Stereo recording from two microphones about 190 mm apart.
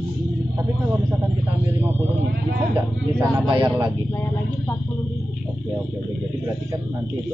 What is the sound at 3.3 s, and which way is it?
Speech, 20° right (ahead or behind).